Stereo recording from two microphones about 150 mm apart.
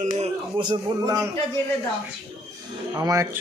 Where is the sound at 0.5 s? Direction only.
30° right (ahead or behind).